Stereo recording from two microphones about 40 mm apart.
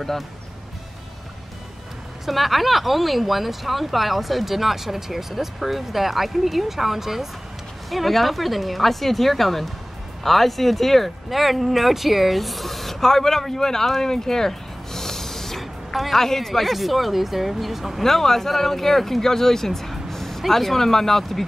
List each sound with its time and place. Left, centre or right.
2.2 s speech: centre
18.0 s speech: centre